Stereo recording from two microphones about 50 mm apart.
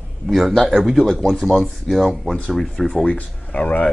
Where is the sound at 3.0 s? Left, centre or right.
Left.